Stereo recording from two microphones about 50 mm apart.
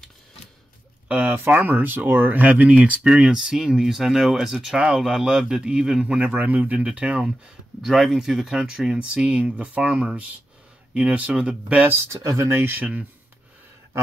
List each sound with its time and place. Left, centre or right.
1.0 s speech: right
6.2 s a man's voice: right
7.2 s speech: centre
12.0 s speech: right
12.6 s a man's voice: right